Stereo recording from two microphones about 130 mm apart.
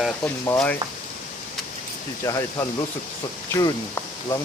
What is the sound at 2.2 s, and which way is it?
Speech, 25° left (ahead or behind).